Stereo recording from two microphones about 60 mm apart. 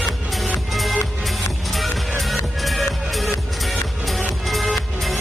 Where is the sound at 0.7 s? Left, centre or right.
Centre.